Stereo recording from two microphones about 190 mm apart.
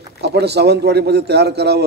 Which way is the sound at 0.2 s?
60° right (ahead or behind).